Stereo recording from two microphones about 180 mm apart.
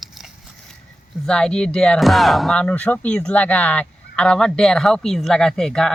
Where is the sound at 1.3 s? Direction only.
5° left (ahead or behind).